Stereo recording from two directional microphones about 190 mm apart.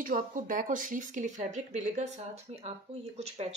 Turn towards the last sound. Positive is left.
turn(degrees=-35)  # may be behind; listen again after turning